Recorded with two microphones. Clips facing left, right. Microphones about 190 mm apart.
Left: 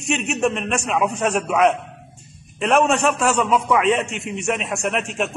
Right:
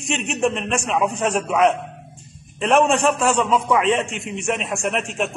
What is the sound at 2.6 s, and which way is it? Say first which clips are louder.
A man's voice: right 1 dB; 35° right (ahead or behind).